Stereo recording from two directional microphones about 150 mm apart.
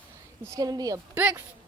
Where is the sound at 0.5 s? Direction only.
25° right (ahead or behind).